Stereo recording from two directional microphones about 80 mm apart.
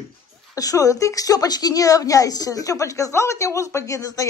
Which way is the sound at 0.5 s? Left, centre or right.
Left.